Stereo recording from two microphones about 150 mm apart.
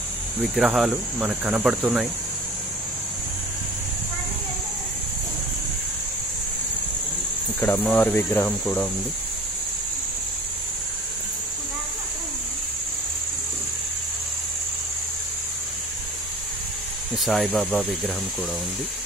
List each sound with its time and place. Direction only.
0.4 s speech: centre (ahead or behind)
7.6 s speech: 10° left (ahead or behind)
17.2 s speech: centre (ahead or behind)